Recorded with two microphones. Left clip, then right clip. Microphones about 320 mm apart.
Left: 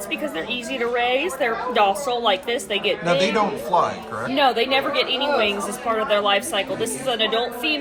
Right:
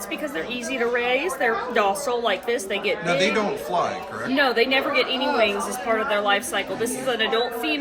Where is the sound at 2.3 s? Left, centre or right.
Centre.